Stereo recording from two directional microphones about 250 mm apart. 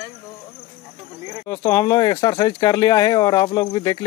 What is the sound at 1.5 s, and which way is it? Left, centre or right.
Speech, centre.